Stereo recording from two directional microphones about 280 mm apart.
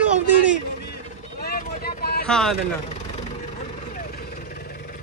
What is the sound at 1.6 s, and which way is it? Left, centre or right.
Vehicle, left.